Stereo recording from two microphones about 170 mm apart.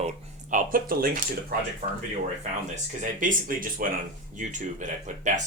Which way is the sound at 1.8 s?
40° right (ahead or behind).